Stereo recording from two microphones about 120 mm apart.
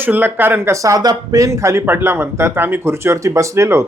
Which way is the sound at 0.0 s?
15° right (ahead or behind).